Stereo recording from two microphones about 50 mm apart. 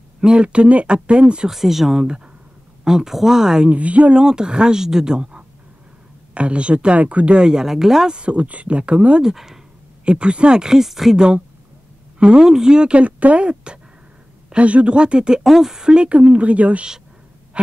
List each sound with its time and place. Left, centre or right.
0.2 s speech: centre
1.5 s speech: centre
3.7 s speech: right
4.2 s speech: centre
8.2 s speech: right
9.2 s speech: centre
10.0 s speech: right; by 11.1 s centre
11.1 s speech: right